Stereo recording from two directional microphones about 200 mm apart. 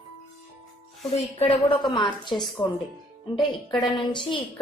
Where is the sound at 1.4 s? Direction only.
25° left (ahead or behind).